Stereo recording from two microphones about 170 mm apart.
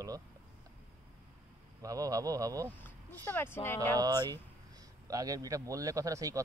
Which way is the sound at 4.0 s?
25° right (ahead or behind).